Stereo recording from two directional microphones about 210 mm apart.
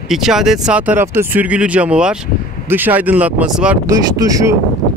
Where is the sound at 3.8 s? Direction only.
15° right (ahead or behind).